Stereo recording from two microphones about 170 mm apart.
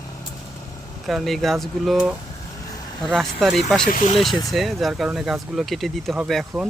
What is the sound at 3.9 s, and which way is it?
Speech, 50° left (ahead or behind).